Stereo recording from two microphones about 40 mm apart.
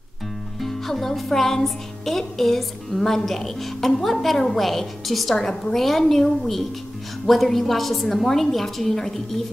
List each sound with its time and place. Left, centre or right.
0.6 s speech: centre